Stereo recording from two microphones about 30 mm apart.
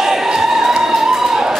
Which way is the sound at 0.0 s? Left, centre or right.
Centre.